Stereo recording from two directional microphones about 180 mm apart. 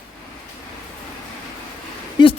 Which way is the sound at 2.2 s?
25° left (ahead or behind).